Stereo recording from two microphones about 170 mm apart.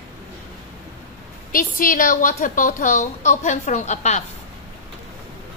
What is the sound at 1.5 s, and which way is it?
A woman's voice, 55° left (ahead or behind).